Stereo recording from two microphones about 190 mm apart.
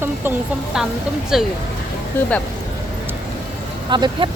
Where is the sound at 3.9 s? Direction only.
25° right (ahead or behind).